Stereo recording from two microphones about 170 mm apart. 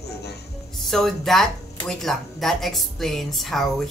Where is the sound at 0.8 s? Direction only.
Centre (ahead or behind).